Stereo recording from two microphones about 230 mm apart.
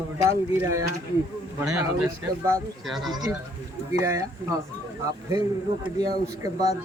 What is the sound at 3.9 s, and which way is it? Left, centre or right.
Speech, centre.